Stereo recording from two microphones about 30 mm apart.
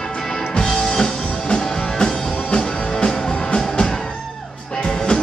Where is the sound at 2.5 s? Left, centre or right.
Left.